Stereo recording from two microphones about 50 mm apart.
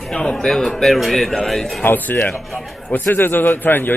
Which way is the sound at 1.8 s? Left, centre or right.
Left.